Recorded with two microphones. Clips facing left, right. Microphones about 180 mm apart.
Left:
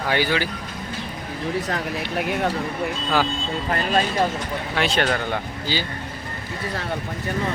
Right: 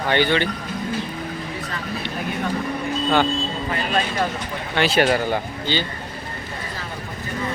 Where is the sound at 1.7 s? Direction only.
70° left (ahead or behind).